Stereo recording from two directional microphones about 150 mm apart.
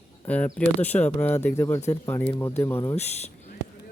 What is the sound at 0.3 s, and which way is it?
Speech, 10° left (ahead or behind).